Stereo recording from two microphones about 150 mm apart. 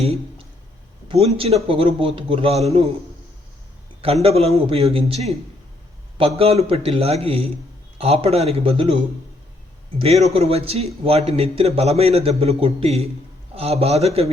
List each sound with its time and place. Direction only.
0.0 s a man's voice: 40° right (ahead or behind)
4.0 s a man's voice: 40° right (ahead or behind)
10.0 s a man's voice: 40° right (ahead or behind)